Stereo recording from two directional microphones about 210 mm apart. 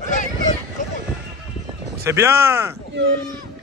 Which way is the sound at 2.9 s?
55° right (ahead or behind).